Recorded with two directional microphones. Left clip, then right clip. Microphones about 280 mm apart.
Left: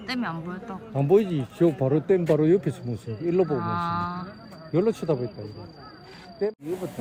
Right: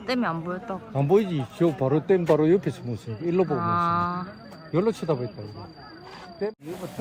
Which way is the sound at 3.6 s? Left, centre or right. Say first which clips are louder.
Right 4 dB; centre.